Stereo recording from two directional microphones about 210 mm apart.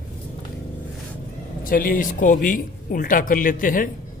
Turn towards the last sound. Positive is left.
turn(degrees=40)  # may be behind; listen again after turning